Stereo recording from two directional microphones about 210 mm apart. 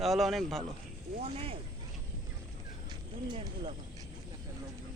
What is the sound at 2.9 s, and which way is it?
Speech, 25° right (ahead or behind).